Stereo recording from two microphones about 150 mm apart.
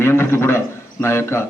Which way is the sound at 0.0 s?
15° left (ahead or behind).